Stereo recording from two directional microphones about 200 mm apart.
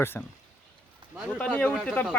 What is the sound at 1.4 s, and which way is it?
Speech, 5° left (ahead or behind).